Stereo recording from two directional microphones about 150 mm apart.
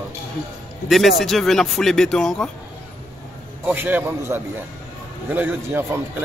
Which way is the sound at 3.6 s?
10° right (ahead or behind).